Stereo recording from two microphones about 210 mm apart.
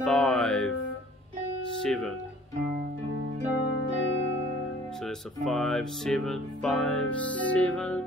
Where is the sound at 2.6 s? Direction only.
40° right (ahead or behind).